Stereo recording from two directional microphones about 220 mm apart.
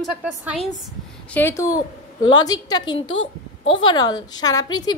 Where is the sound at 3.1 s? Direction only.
60° left (ahead or behind).